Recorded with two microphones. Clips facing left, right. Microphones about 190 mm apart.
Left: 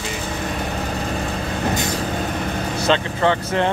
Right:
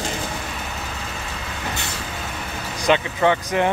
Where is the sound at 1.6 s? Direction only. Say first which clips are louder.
Left 9 dB; 40° left (ahead or behind).